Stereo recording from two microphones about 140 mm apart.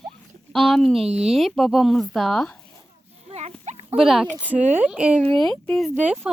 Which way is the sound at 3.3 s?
50° right (ahead or behind).